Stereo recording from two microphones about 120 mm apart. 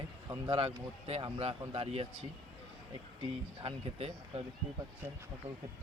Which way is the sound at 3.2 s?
50° right (ahead or behind).